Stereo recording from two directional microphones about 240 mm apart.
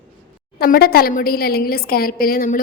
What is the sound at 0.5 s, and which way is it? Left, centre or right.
A woman's voice, left.